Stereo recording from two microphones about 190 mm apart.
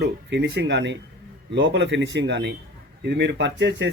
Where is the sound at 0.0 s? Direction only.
65° right (ahead or behind).